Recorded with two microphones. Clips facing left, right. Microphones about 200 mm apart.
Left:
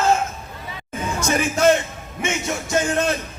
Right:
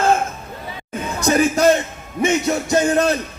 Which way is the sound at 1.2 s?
35° right (ahead or behind).